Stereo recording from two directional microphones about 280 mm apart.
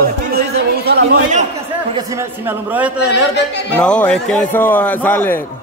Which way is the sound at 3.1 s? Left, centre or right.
Left.